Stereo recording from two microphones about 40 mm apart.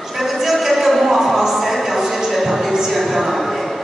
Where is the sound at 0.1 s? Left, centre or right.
Centre.